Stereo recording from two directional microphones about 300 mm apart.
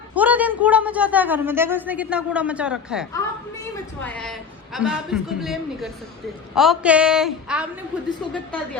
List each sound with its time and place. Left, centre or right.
0.1 s a woman's voice: centre